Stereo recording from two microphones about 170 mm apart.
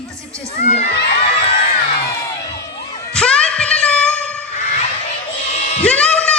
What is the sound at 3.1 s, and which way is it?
Music, 5° left (ahead or behind).